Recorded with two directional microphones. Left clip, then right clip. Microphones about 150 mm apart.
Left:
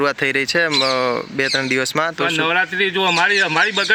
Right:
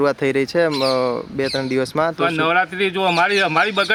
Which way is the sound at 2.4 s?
30° right (ahead or behind).